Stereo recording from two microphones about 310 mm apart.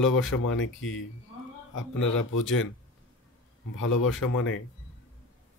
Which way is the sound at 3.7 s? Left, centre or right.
Left.